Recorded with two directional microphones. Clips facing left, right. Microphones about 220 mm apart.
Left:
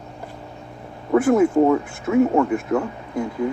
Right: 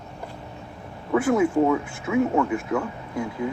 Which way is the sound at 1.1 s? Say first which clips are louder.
Left 4 dB; 45° left (ahead or behind).